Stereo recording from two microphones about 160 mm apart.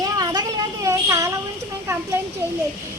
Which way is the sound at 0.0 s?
25° right (ahead or behind).